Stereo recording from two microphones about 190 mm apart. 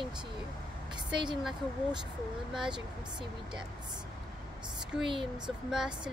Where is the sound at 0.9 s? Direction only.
25° right (ahead or behind).